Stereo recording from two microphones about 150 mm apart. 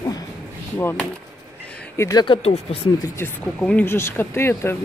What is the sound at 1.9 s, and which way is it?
Speech, 25° left (ahead or behind).